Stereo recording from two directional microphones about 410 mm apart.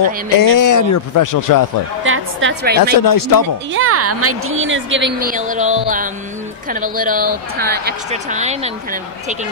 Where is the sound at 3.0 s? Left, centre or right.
Left.